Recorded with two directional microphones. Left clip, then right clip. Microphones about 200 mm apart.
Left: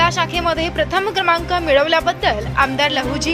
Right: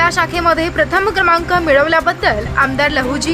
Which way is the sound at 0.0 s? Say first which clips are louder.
Right 3 dB; 5° left (ahead or behind).